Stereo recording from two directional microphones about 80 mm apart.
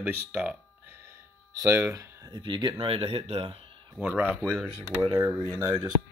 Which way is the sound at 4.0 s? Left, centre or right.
Centre.